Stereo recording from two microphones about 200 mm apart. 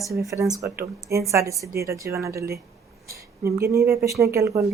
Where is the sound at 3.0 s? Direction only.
15° right (ahead or behind).